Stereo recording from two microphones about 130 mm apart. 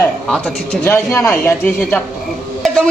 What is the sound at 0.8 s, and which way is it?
A man's voice, 20° left (ahead or behind).